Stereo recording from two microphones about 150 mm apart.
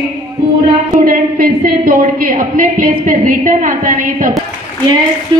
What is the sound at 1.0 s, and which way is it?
A woman's voice, 70° right (ahead or behind).